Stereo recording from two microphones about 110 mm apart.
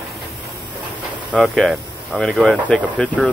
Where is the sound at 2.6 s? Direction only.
10° left (ahead or behind).